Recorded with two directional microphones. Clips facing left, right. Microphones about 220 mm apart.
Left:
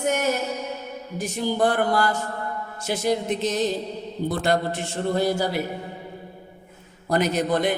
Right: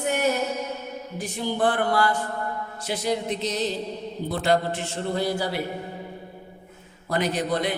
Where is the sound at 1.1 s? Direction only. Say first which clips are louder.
Left 3 dB; 45° left (ahead or behind).